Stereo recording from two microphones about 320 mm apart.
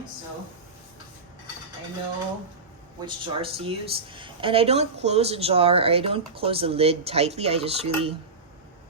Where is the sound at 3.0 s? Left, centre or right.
Centre.